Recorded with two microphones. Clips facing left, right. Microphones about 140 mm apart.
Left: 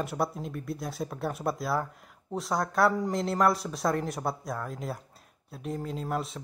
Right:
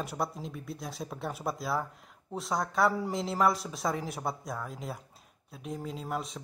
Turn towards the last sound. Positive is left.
turn(degrees=0)  # may be behind; listen again after turning